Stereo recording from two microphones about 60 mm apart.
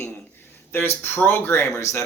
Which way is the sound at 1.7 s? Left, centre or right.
Left.